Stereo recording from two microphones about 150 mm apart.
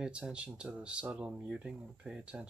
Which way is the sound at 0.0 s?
5° right (ahead or behind).